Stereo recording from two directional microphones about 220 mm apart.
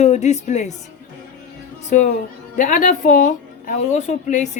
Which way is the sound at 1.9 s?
35° left (ahead or behind).